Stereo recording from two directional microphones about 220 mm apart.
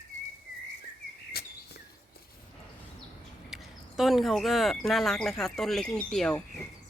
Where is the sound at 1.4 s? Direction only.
45° left (ahead or behind).